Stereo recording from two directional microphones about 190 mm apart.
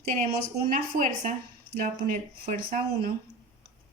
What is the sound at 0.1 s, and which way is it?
A woman's voice, 40° right (ahead or behind).